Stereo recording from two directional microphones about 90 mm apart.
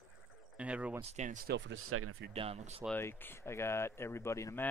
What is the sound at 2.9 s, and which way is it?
Speech, 25° left (ahead or behind).